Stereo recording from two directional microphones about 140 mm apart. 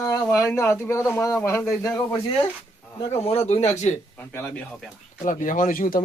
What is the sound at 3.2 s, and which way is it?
Speech, 50° left (ahead or behind).